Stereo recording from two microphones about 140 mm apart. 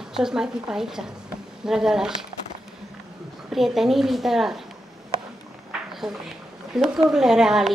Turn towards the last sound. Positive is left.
turn(degrees=-5)  # may be behind; listen again after turning